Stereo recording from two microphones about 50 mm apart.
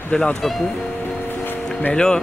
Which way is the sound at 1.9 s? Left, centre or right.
Centre.